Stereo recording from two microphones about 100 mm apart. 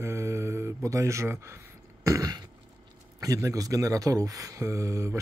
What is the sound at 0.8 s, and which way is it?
Speech, 30° right (ahead or behind).